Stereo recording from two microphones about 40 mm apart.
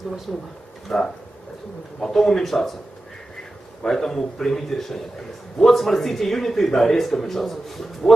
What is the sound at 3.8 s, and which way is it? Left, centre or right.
A man's voice, centre.